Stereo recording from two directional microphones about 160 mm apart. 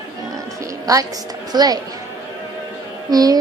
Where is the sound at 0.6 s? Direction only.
20° right (ahead or behind).